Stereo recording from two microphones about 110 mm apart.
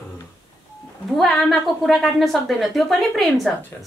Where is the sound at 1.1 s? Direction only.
Centre (ahead or behind).